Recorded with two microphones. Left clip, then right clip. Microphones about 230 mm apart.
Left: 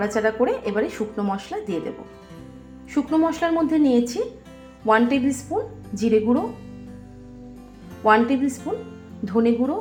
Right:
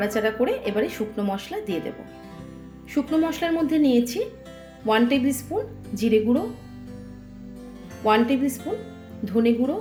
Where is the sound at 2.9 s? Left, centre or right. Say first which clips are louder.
Left 2 dB; centre.